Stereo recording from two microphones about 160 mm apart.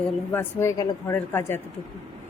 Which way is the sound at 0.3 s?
15° left (ahead or behind).